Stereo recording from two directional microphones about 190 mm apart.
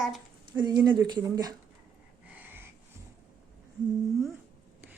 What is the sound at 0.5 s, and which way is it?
Speech, 20° right (ahead or behind).